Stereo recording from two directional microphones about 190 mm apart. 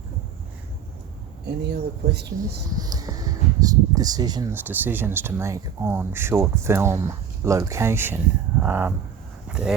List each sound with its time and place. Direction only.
1.5 s speech: 60° right (ahead or behind)
2.7 s speech: 20° right (ahead or behind)
4.5 s speech: 10° right (ahead or behind)